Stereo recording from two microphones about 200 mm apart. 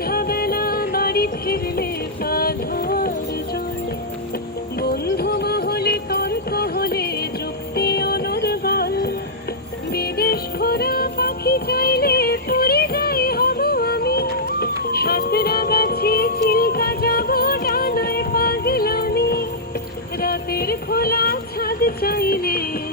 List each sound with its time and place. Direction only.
0.0 s music: 50° left (ahead or behind)
4.8 s music: 50° left (ahead or behind)